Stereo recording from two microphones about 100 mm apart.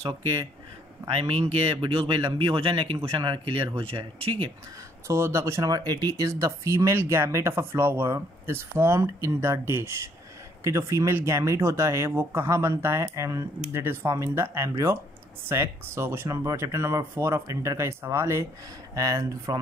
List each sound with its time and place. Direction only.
0.0 s speech: 30° right (ahead or behind)
1.8 s speech: 55° right (ahead or behind)
5.0 s speech: 30° right (ahead or behind)
5.7 s speech: 40° right (ahead or behind)